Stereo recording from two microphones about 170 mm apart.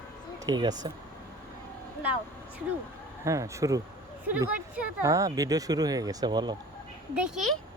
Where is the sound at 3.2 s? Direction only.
20° right (ahead or behind).